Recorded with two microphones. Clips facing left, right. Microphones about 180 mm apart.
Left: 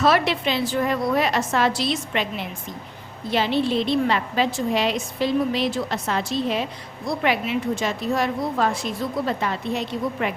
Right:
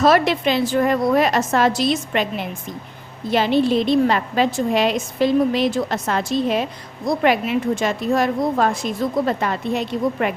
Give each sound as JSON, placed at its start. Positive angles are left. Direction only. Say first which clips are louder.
{"t": 0.0, "sound": "a woman's voice", "louder": "right 4 dB", "side_deg": -45}
{"t": 3.2, "sound": "a woman's voice", "louder": "right 4 dB", "side_deg": -50}